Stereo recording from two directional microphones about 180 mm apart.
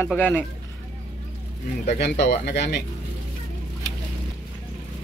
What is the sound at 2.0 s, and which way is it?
Speech, 70° left (ahead or behind).